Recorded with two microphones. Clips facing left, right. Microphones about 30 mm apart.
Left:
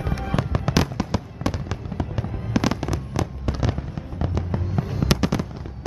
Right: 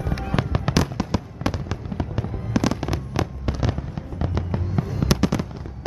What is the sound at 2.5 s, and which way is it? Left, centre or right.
Fireworks, centre.